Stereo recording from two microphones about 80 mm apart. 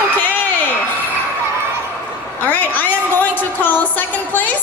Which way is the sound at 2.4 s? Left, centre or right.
Left.